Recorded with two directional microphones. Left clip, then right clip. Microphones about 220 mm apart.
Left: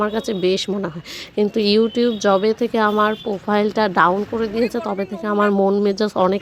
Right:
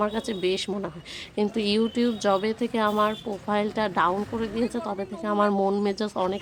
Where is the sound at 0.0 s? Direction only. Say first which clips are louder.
Left 6 dB; 20° left (ahead or behind).